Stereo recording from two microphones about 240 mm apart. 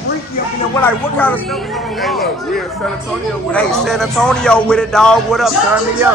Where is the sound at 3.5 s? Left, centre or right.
Centre.